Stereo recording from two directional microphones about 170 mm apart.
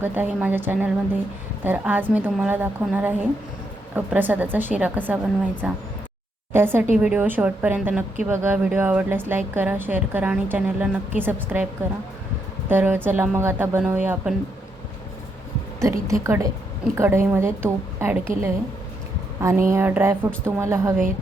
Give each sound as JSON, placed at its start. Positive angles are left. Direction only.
{"t": 0.0, "sound": "a woman's voice", "side_deg": -10}
{"t": 12.6, "sound": "a woman's voice", "side_deg": -10}
{"t": 15.8, "sound": "a woman's voice", "side_deg": -20}